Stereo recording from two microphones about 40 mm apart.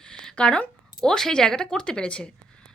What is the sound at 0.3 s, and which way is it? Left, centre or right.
Speech, left.